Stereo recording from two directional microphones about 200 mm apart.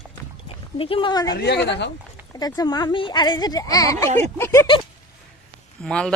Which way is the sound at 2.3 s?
20° left (ahead or behind).